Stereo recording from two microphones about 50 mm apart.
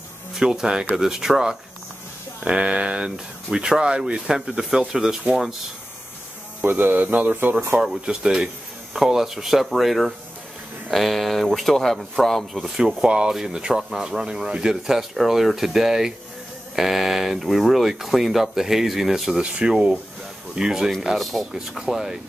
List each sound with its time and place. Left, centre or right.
0.3 s speech: centre
2.4 s a sound: right
3.4 s speech: centre
6.6 s speech: right
7.8 s speech: centre
12.6 s speech: centre
19.4 s a sound: centre
20.5 s speech: centre
21.2 s speech: centre
21.5 s speech: centre